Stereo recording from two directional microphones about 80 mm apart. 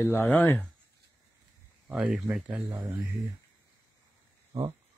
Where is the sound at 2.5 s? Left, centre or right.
Right.